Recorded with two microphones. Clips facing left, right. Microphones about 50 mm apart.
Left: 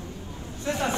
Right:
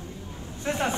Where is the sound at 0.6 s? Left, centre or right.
Right.